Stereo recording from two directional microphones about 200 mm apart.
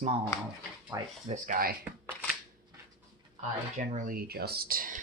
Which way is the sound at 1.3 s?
40° right (ahead or behind).